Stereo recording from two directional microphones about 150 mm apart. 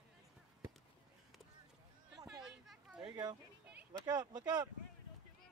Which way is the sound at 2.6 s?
5° right (ahead or behind).